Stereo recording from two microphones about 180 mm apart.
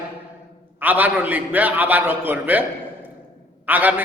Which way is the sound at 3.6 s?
10° right (ahead or behind).